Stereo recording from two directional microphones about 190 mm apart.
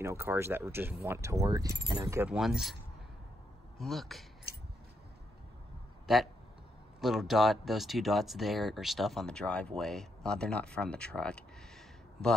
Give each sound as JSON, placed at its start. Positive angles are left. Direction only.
{"t": 0.0, "sound": "speech", "side_deg": -15}
{"t": 2.3, "sound": "speech", "side_deg": 0}
{"t": 3.8, "sound": "speech", "side_deg": 0}
{"t": 7.0, "sound": "speech", "side_deg": 0}